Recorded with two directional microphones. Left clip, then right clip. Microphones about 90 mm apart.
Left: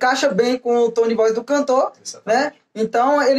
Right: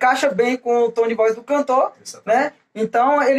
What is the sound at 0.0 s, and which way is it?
Speech, 35° left (ahead or behind).